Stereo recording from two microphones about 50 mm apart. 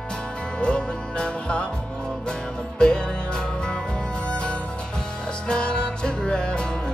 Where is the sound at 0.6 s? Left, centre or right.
Centre.